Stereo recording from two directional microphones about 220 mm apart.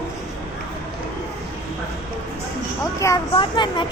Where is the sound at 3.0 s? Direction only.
20° left (ahead or behind).